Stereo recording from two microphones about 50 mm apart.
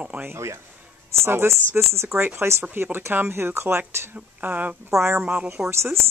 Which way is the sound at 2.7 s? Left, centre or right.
Right.